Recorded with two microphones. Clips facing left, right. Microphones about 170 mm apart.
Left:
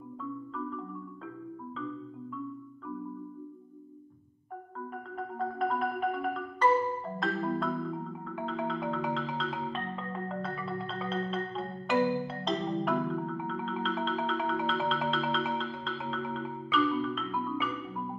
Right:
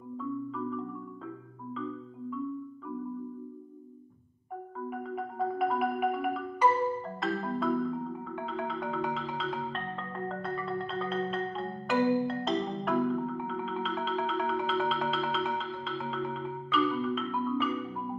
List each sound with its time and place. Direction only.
0.2 s marimba: centre (ahead or behind)
4.9 s marimba: 5° right (ahead or behind)
7.2 s music: centre (ahead or behind)